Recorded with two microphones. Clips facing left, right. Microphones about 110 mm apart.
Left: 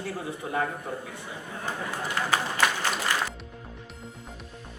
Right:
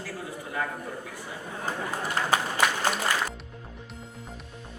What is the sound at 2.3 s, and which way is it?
Speech, 15° right (ahead or behind).